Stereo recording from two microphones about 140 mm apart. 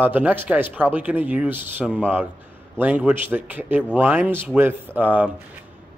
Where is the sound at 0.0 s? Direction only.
10° right (ahead or behind).